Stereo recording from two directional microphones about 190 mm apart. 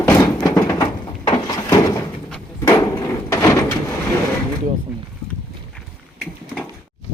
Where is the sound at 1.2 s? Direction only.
20° left (ahead or behind).